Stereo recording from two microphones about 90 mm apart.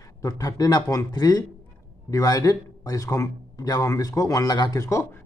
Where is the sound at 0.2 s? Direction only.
40° left (ahead or behind).